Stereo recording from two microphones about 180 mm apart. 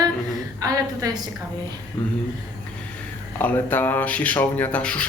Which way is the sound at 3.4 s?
10° left (ahead or behind).